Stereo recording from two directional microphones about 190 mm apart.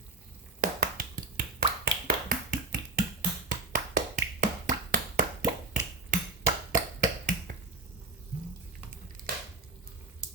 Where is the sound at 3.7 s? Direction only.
45° right (ahead or behind).